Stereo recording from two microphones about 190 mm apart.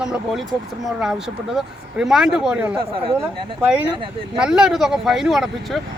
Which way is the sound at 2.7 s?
30° right (ahead or behind).